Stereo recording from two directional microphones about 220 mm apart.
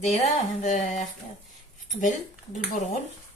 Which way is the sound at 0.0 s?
30° left (ahead or behind).